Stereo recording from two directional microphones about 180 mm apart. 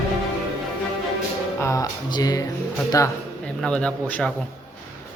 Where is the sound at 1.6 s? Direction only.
15° left (ahead or behind).